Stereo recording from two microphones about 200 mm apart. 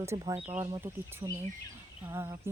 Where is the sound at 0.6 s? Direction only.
20° right (ahead or behind).